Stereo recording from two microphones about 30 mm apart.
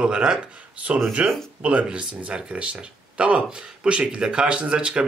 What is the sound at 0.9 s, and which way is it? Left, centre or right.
Speech, right.